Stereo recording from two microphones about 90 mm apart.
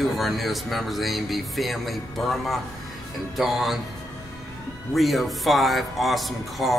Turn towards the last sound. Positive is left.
turn(degrees=0)  # may be behind; listen again after turning